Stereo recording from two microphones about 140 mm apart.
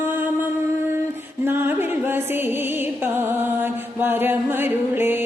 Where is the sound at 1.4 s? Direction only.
15° right (ahead or behind).